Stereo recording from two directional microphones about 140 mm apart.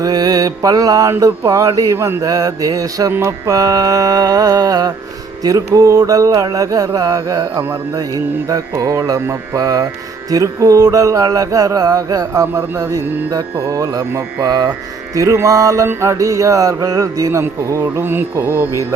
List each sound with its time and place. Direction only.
0.0 s mantra: 25° right (ahead or behind)